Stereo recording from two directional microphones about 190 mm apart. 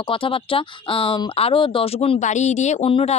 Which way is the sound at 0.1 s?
30° left (ahead or behind).